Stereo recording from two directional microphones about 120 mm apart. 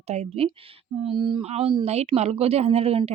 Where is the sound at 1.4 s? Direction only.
60° right (ahead or behind).